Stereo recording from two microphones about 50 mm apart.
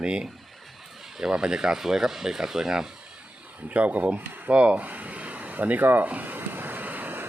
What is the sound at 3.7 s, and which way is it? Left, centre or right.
Speech, right.